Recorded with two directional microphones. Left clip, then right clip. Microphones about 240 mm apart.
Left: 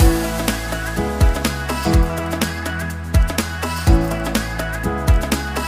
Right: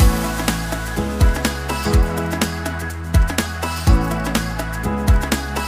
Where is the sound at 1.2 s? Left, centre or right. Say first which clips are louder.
Even; centre.